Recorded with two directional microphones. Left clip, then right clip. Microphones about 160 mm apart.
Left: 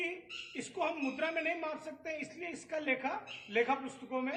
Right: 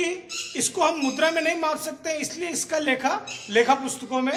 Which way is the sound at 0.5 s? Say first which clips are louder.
Right 14 dB; 25° right (ahead or behind).